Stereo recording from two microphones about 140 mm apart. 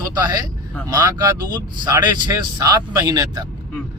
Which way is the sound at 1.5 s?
25° right (ahead or behind).